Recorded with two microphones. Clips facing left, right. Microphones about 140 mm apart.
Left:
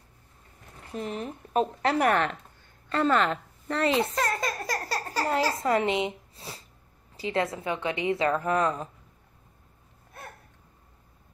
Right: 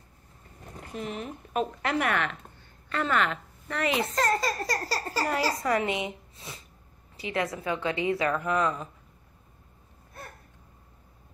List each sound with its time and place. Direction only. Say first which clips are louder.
0.9 s a woman's voice: left 2 dB; 35° left (ahead or behind)
4.1 s a sound: right 2 dB; 5° left (ahead or behind)
5.3 s speech: left 3 dB; 25° left (ahead or behind)